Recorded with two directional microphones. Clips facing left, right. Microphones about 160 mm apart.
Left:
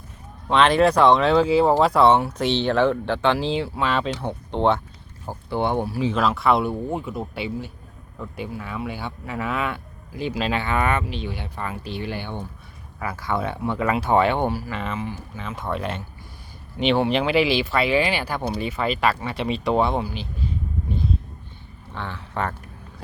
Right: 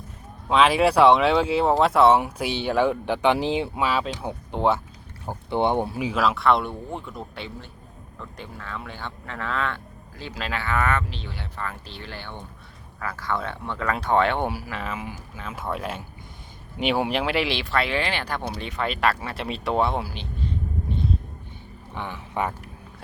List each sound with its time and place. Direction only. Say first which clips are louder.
0.4 s speech: left 2 dB; 5° right (ahead or behind)
3.8 s speech: left 2 dB; 5° right (ahead or behind)
5.3 s speech: right 1 dB; 20° right (ahead or behind)
6.1 s speech: left 1 dB; centre (ahead or behind)
21.9 s speech: even; 15° right (ahead or behind)